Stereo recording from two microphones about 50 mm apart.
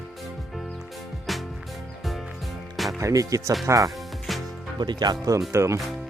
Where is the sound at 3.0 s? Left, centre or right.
Right.